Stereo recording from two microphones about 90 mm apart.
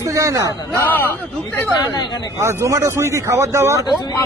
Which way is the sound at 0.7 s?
20° left (ahead or behind).